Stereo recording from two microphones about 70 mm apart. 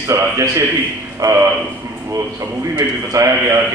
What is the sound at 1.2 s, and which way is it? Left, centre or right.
Speech, right.